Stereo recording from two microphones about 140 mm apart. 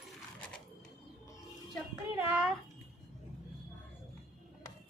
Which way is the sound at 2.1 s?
10° right (ahead or behind).